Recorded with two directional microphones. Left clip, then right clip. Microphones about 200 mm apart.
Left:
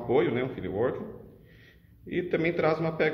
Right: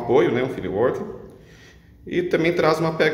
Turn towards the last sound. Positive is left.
turn(degrees=0)  # may be behind; listen again after turning